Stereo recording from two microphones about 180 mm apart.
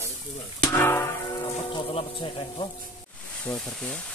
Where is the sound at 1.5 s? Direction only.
30° left (ahead or behind).